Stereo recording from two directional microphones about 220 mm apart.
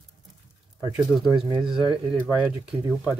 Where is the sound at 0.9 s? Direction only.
Centre (ahead or behind).